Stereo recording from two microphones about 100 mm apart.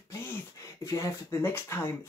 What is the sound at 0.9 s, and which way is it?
Speech, 25° left (ahead or behind).